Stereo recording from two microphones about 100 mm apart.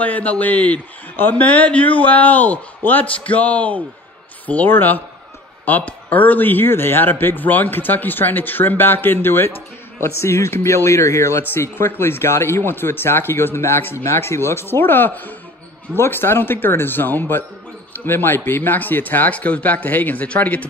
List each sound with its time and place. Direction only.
0.0 s a man's voice: 15° left (ahead or behind)